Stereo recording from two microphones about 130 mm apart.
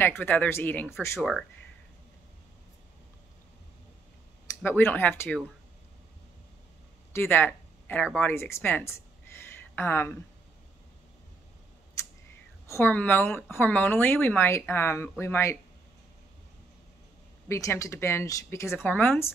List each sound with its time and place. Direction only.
0.0 s speech: 15° left (ahead or behind)
4.6 s speech: 15° left (ahead or behind)
7.1 s a sound: 15° left (ahead or behind)
8.2 s speech: 15° left (ahead or behind)
12.6 s speech: 20° left (ahead or behind)
17.5 s speech: 25° left (ahead or behind)